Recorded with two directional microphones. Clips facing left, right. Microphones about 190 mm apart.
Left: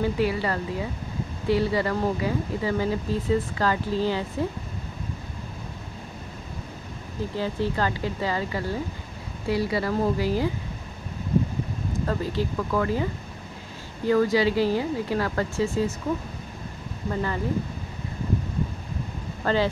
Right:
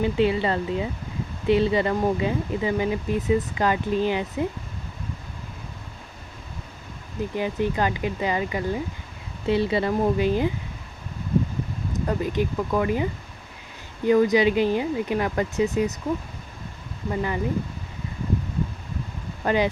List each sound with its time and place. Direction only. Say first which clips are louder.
0.0 s speech: right 3 dB; 20° right (ahead or behind)
7.3 s speech: right 2 dB; 15° right (ahead or behind)
11.9 s speech: right 2 dB; 15° right (ahead or behind)
14.0 s speech: right 3 dB; 20° right (ahead or behind)
17.1 s speech: right 1 dB; 15° right (ahead or behind)
19.4 s speech: right 1 dB; 15° right (ahead or behind)